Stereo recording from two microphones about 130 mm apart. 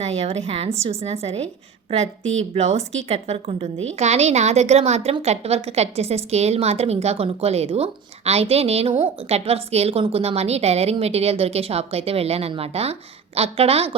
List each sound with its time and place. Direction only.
0.0 s a woman's voice: 55° right (ahead or behind)